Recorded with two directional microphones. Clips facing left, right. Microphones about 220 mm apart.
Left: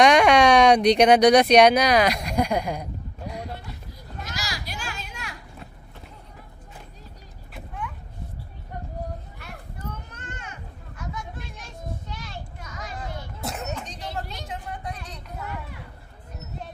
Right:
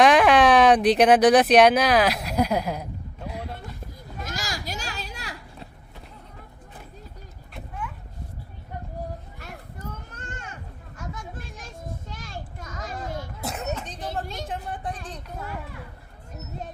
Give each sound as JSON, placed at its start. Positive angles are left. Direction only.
{"t": 0.0, "sound": "speech", "side_deg": 0}
{"t": 4.2, "sound": "children playing", "side_deg": -50}
{"t": 7.5, "sound": "a sound", "side_deg": 0}
{"t": 9.4, "sound": "children playing", "side_deg": -45}
{"t": 10.9, "sound": "a sound", "side_deg": -45}
{"t": 13.4, "sound": "cough", "side_deg": 0}
{"t": 14.0, "sound": "vehicle", "side_deg": -50}
{"t": 14.4, "sound": "vehicle", "side_deg": -30}